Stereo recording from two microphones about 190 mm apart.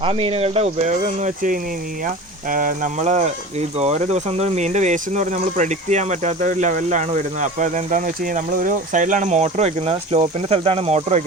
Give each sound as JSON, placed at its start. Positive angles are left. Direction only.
{"t": 0.0, "sound": "speech", "side_deg": -30}